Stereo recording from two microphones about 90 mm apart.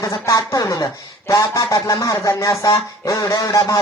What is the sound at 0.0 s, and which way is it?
Speech, 40° left (ahead or behind).